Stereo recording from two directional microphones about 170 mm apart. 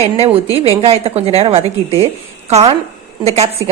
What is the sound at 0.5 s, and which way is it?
A woman's voice, 35° right (ahead or behind).